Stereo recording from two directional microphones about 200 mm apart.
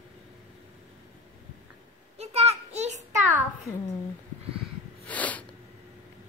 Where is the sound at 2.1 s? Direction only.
30° right (ahead or behind).